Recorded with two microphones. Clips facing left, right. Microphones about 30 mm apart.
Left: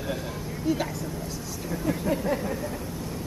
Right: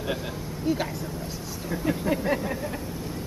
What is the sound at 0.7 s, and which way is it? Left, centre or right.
Speech, right.